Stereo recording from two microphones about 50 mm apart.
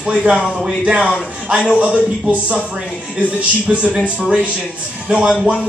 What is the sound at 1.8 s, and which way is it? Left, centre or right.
Speech, right.